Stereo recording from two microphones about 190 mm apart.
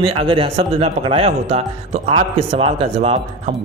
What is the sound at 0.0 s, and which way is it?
Speech, 30° right (ahead or behind).